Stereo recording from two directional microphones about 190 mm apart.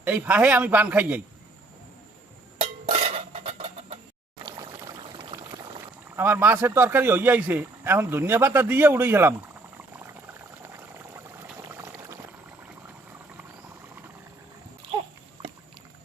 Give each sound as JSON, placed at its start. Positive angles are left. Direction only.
{"t": 0.0, "sound": "a man's voice", "side_deg": -10}
{"t": 2.6, "sound": "a sound", "side_deg": -35}
{"t": 4.4, "sound": "pour", "side_deg": -20}
{"t": 6.1, "sound": "a man's voice", "side_deg": -10}
{"t": 10.7, "sound": "boiling", "side_deg": -15}